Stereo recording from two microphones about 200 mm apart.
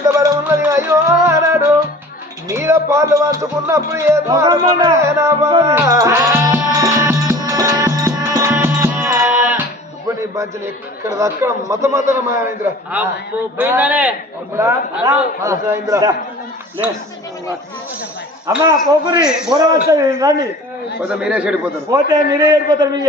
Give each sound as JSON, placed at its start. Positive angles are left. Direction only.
{"t": 0.1, "sound": "music", "side_deg": -15}
{"t": 2.5, "sound": "speech", "side_deg": -15}
{"t": 6.7, "sound": "music", "side_deg": -15}
{"t": 11.0, "sound": "speech", "side_deg": -15}
{"t": 18.4, "sound": "a man's voice", "side_deg": -20}
{"t": 22.1, "sound": "a man's voice", "side_deg": -20}